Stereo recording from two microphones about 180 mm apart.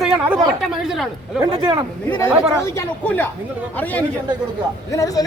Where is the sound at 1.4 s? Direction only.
25° right (ahead or behind).